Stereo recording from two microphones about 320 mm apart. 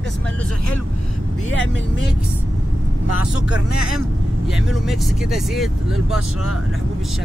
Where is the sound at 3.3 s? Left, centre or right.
Left.